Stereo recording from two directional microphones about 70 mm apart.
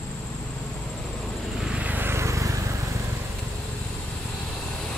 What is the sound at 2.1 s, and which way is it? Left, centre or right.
Vehicle, right.